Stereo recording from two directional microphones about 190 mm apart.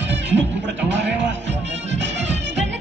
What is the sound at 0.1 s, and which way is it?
Music, 70° right (ahead or behind).